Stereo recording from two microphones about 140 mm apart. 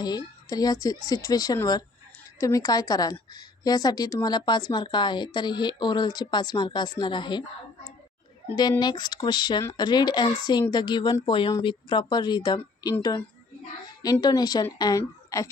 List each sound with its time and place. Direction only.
0.0 s a woman's voice: 30° left (ahead or behind)
8.8 s a woman's voice: 30° left (ahead or behind)